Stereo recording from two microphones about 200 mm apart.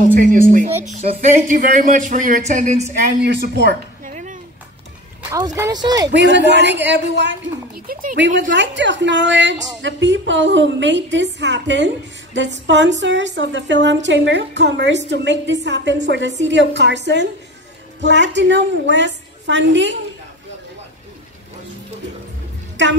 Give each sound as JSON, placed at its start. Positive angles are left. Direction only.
{"t": 0.0, "sound": "speech", "side_deg": -40}
{"t": 3.2, "sound": "a woman's voice", "side_deg": -55}
{"t": 4.0, "sound": "a sound", "side_deg": -40}
{"t": 5.3, "sound": "speech", "side_deg": -15}
{"t": 6.0, "sound": "a woman's voice", "side_deg": -60}
{"t": 8.5, "sound": "a woman's voice", "side_deg": -65}
{"t": 22.8, "sound": "a woman's voice", "side_deg": -65}